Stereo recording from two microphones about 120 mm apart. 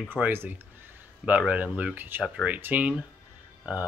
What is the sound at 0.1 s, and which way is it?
Speech, 20° right (ahead or behind).